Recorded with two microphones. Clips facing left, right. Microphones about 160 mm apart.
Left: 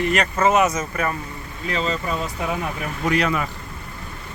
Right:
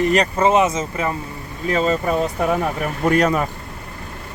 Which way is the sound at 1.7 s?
50° right (ahead or behind).